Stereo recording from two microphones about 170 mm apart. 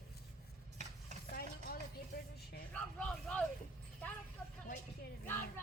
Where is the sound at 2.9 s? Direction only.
5° left (ahead or behind).